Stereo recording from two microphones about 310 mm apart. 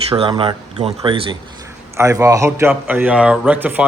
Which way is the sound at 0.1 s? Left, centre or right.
Centre.